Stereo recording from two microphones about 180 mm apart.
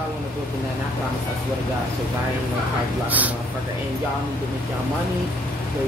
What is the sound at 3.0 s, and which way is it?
Speech, 10° right (ahead or behind).